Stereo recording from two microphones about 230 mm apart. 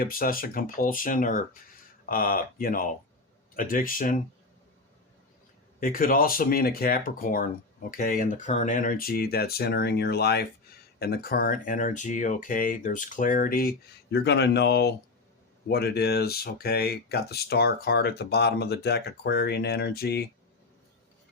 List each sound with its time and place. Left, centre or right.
0.0 s speech: left
5.8 s speech: left